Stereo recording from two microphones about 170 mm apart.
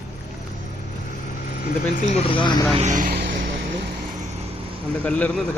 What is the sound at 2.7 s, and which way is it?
Speech, 45° right (ahead or behind).